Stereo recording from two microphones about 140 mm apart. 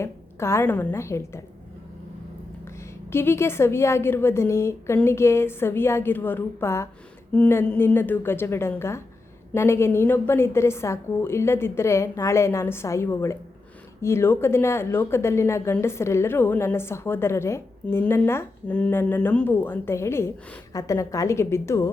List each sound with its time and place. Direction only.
0.0 s a woman's voice: 20° left (ahead or behind)
3.1 s a woman's voice: 15° left (ahead or behind)